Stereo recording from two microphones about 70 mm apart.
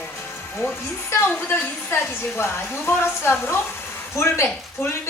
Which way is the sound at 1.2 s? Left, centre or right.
Left.